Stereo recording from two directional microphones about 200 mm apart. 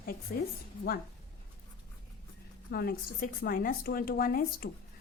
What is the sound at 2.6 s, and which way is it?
A woman's voice, 50° left (ahead or behind).